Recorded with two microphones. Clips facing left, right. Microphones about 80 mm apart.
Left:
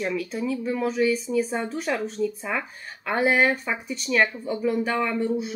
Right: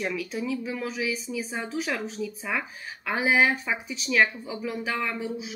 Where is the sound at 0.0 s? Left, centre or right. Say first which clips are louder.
Left 3 dB; centre.